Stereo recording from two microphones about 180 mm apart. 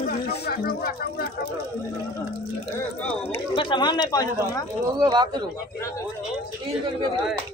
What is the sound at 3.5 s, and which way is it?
Speech, 25° left (ahead or behind).